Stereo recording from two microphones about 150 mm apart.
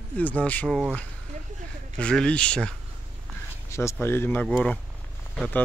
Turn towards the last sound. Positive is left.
turn(degrees=10)  # may be behind; listen again after turning